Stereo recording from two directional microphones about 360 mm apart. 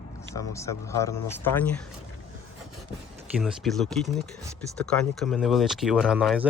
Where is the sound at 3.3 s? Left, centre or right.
Centre.